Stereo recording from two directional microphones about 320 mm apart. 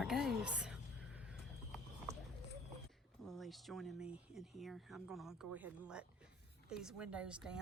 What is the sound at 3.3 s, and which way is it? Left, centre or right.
Speech, centre.